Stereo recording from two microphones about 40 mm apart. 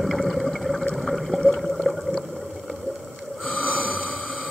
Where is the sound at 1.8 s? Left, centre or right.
Centre.